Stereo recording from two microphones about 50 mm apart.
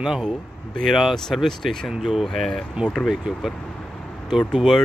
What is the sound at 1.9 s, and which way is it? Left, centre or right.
Speech, centre.